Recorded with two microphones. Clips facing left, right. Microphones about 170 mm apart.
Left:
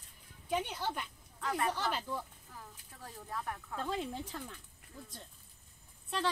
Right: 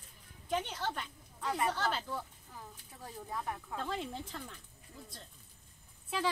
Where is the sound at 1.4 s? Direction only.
15° right (ahead or behind).